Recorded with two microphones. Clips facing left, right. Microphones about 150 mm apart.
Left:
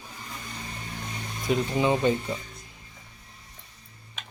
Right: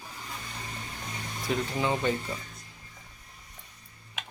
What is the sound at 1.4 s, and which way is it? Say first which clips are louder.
Speech: left 5 dB; 20° left (ahead or behind).